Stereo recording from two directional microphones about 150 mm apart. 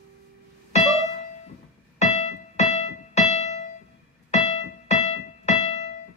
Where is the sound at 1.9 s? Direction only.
45° left (ahead or behind).